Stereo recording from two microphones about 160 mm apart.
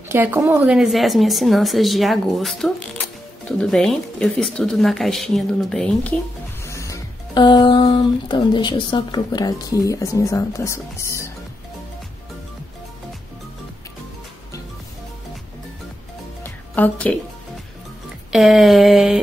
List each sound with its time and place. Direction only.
0.1 s a woman's voice: 15° right (ahead or behind)
0.7 s speech: centre (ahead or behind)
6.6 s speech: 20° left (ahead or behind)
16.4 s music: 10° left (ahead or behind)
18.3 s speech: centre (ahead or behind)